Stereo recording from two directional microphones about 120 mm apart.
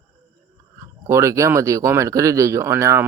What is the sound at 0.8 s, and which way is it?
Speech, 25° right (ahead or behind).